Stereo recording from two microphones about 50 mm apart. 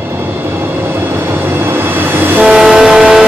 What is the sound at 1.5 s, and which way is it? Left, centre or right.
Music, right.